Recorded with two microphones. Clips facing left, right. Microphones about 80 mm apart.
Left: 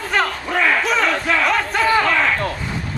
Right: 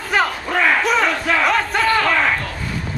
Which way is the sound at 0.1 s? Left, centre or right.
Centre.